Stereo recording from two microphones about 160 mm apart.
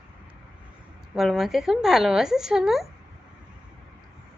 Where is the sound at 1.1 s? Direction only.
Centre (ahead or behind).